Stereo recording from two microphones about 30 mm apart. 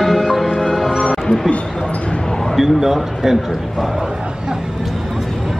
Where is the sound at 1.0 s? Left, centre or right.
Left.